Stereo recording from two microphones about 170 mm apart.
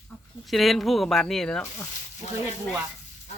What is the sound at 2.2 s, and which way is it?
Speech, 45° left (ahead or behind).